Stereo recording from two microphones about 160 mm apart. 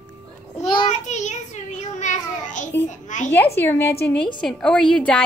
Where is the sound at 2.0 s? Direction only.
50° left (ahead or behind).